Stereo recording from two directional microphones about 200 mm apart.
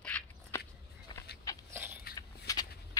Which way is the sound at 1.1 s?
20° left (ahead or behind).